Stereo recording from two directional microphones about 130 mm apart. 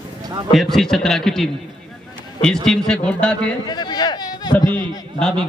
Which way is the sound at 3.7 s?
35° left (ahead or behind).